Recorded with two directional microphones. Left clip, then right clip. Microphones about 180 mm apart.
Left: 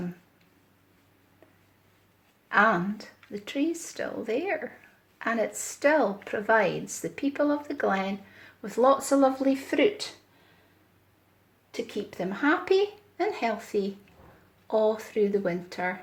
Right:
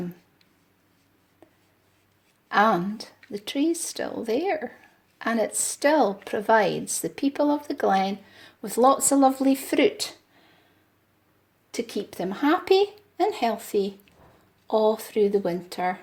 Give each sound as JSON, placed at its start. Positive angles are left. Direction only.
{"t": 2.6, "sound": "speech", "side_deg": -35}
{"t": 11.7, "sound": "speech", "side_deg": -50}